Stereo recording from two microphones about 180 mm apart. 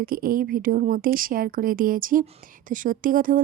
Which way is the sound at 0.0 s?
55° right (ahead or behind).